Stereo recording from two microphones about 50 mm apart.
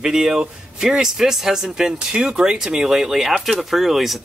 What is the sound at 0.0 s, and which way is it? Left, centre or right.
Speech, centre.